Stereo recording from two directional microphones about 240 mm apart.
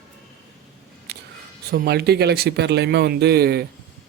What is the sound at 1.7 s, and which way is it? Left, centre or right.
Speech, right.